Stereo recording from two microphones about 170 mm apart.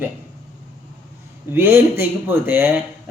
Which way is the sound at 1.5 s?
15° right (ahead or behind).